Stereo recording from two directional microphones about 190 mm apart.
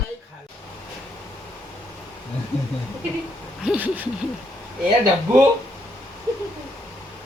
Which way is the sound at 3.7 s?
10° right (ahead or behind).